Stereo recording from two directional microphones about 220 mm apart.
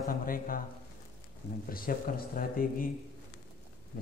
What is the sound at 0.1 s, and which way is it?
Speech, 40° left (ahead or behind).